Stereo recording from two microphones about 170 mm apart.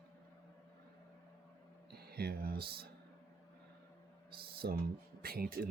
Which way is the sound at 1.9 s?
65° right (ahead or behind).